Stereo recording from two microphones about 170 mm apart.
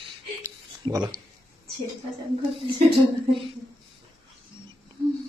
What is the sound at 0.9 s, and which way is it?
Speech, 20° right (ahead or behind).